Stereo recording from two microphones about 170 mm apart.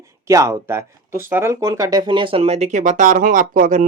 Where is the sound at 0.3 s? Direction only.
15° right (ahead or behind).